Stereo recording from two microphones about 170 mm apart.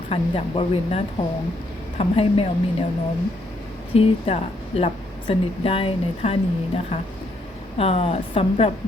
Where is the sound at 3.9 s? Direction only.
35° left (ahead or behind).